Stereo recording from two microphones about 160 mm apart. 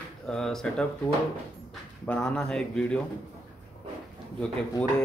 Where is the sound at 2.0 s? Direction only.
5° left (ahead or behind).